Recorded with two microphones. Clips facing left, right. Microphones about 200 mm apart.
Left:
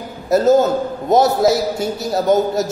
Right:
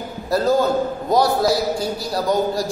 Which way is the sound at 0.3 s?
20° left (ahead or behind).